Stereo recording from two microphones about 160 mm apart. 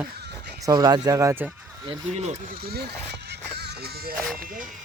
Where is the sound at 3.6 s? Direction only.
75° right (ahead or behind).